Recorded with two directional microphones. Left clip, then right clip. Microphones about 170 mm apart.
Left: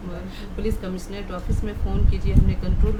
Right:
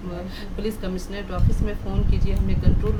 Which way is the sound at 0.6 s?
5° right (ahead or behind).